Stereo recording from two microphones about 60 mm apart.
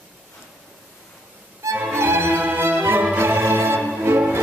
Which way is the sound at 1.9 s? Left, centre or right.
Right.